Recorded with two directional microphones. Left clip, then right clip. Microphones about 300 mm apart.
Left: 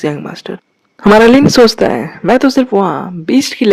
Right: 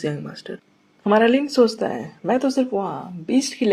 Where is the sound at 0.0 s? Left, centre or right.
Left.